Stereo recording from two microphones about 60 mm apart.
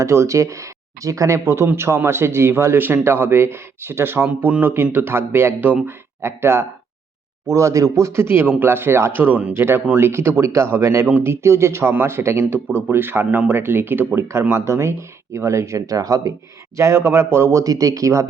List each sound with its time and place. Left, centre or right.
0.0 s a man's voice: right
7.5 s a man's voice: right
11.0 s a man's voice: right
14.5 s a man's voice: right
16.7 s a man's voice: right
17.5 s speech: right